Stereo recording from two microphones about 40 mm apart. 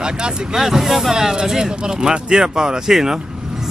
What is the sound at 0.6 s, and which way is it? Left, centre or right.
Speech, centre.